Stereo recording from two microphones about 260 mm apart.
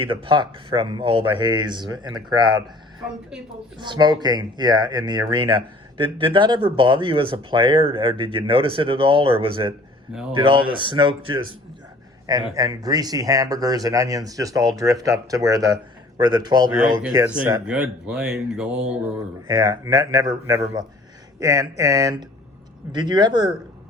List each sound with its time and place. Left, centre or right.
0.0 s speech: centre
3.8 s speech: centre
12.5 s speech: centre